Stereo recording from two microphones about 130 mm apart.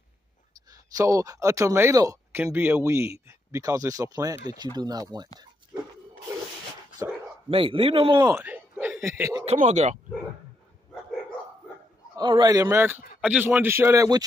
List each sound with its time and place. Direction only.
0.9 s speech: 25° right (ahead or behind)
5.7 s dog: 15° right (ahead or behind)
7.0 s dog: 25° right (ahead or behind)
7.4 s speech: 45° right (ahead or behind)
8.2 s speech: 25° right (ahead or behind)
8.5 s a sound: 15° right (ahead or behind)
9.0 s speech: 20° right (ahead or behind)
9.6 s speech: 60° right (ahead or behind)
12.2 s speech: 35° right (ahead or behind)
13.2 s a man's voice: 10° right (ahead or behind)